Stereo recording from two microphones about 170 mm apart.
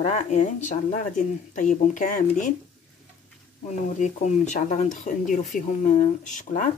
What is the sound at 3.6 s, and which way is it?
Speech, 45° left (ahead or behind).